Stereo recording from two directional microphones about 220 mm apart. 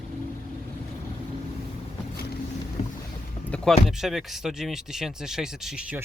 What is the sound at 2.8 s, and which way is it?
Boat, 30° left (ahead or behind).